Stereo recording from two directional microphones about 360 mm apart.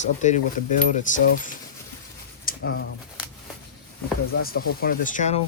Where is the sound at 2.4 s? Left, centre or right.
Left.